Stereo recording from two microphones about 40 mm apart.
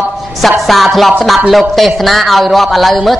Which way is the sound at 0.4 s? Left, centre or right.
Centre.